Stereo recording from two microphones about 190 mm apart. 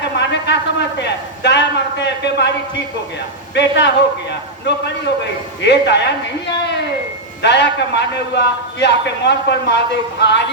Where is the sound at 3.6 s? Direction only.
65° left (ahead or behind).